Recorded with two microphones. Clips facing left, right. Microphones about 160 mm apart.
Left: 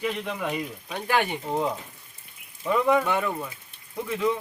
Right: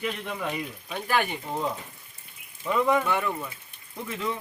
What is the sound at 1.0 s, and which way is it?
Speech, 20° left (ahead or behind).